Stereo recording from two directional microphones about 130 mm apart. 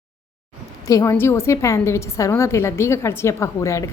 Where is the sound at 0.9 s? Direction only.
25° left (ahead or behind).